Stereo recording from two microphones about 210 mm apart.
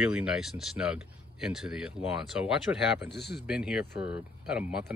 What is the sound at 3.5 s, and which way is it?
Speech, 5° right (ahead or behind).